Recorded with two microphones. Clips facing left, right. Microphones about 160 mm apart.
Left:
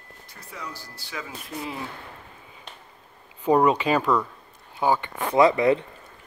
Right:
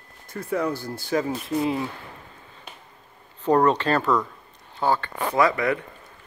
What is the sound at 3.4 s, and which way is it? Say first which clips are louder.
Speech: even; 10° left (ahead or behind).